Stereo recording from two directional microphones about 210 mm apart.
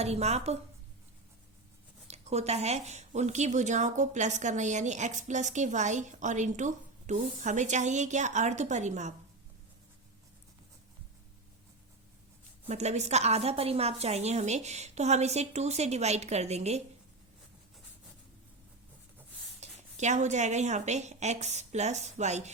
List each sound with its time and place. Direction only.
0.0 s a woman's voice: 30° right (ahead or behind)
2.0 s a woman's voice: 30° right (ahead or behind)
12.6 s a woman's voice: 30° right (ahead or behind)
19.5 s a woman's voice: 35° right (ahead or behind)